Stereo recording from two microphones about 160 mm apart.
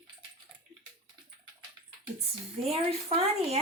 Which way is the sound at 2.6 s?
40° right (ahead or behind).